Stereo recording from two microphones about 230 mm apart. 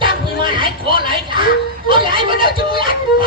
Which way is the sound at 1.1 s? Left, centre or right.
Right.